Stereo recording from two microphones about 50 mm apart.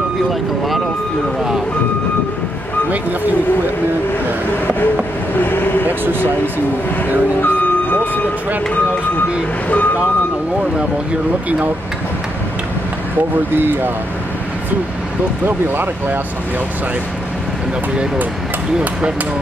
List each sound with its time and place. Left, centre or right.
0.3 s speech: centre
2.9 s speech: right
5.4 s speech: left
5.9 s speech: right
7.4 s vehicle: left
13.6 s speech: right
15.4 s speech: right